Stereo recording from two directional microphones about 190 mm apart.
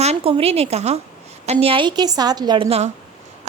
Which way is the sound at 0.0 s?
30° right (ahead or behind).